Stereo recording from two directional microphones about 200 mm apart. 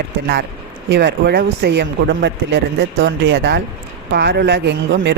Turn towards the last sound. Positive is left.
turn(degrees=-65)  # may be behind; listen again after turning